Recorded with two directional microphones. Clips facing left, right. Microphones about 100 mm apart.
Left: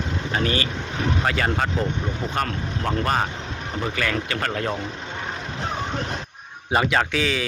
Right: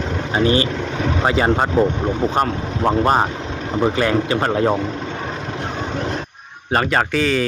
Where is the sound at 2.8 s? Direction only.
30° right (ahead or behind).